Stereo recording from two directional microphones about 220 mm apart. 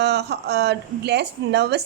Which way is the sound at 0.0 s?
50° right (ahead or behind).